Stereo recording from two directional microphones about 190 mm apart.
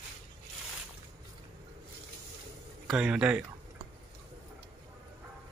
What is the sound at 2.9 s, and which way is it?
Speech, 5° right (ahead or behind).